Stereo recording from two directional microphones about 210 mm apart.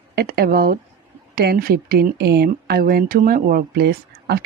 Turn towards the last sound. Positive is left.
turn(degrees=-50)  # may be behind; listen again after turning